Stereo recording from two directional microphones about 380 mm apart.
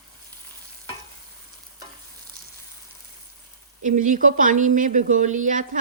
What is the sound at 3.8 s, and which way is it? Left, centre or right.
A woman's voice, centre.